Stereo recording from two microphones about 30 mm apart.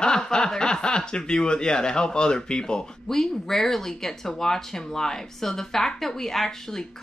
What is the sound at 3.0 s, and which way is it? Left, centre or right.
Speech, centre.